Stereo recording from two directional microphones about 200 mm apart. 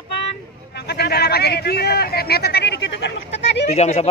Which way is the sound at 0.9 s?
55° left (ahead or behind).